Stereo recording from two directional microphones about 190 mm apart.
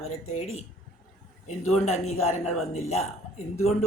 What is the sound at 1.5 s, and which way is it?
Speech, 35° left (ahead or behind).